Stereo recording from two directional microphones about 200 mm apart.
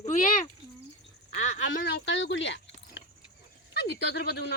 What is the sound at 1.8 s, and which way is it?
Speech, 60° left (ahead or behind).